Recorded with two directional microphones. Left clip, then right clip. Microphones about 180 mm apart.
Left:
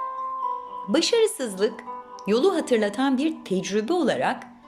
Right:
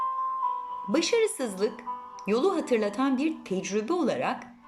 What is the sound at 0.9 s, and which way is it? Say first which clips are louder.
Speech: left 4 dB; 10° right (ahead or behind).